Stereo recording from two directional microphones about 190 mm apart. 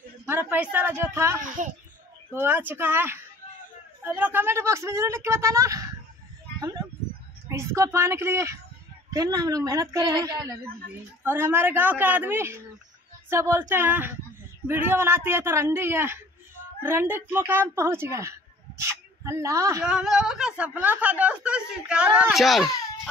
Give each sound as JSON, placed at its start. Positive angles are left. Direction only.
{"t": 0.3, "sound": "a woman's voice", "side_deg": -10}
{"t": 1.4, "sound": "a child's voice", "side_deg": -45}
{"t": 2.3, "sound": "a woman's voice", "side_deg": -10}
{"t": 7.4, "sound": "a woman's voice", "side_deg": -15}
{"t": 19.8, "sound": "speech", "side_deg": -5}